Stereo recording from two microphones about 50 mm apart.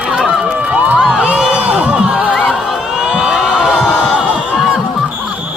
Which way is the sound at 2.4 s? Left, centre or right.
Centre.